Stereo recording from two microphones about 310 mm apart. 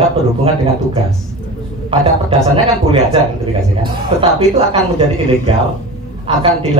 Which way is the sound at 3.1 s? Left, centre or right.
Centre.